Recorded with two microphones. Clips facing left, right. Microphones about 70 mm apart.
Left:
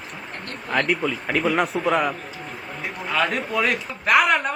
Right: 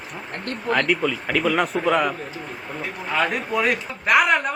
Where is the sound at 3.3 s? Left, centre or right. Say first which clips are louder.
Right 1 dB; centre.